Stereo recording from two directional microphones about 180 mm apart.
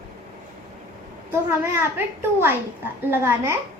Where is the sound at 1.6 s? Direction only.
10° right (ahead or behind).